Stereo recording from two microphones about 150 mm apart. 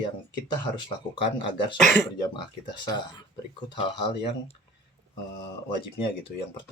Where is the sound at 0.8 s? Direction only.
35° left (ahead or behind).